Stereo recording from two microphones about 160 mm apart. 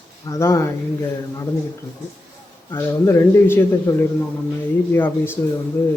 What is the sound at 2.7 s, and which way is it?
Speech, 15° left (ahead or behind).